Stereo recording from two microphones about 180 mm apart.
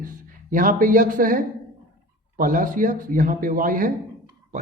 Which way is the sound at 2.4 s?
50° right (ahead or behind).